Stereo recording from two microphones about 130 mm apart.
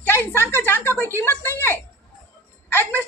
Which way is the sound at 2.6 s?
15° left (ahead or behind).